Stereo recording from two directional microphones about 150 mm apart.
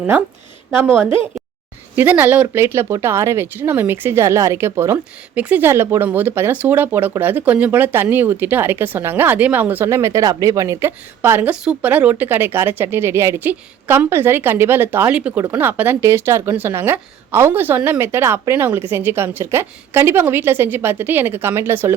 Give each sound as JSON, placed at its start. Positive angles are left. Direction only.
{"t": 0.7, "sound": "a woman's voice", "side_deg": -15}
{"t": 2.0, "sound": "a woman's voice", "side_deg": -10}